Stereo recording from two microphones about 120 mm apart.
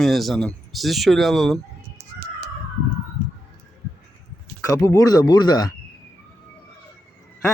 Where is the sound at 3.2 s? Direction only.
15° left (ahead or behind).